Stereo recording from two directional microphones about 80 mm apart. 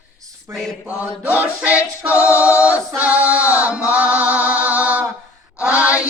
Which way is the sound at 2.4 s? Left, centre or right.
Centre.